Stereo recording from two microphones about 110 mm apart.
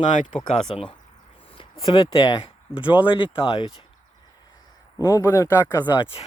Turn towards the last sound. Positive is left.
turn(degrees=50)  # may be behind; listen again after turning